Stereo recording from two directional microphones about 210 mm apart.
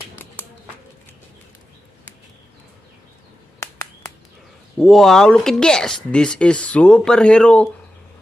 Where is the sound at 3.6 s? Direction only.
15° left (ahead or behind).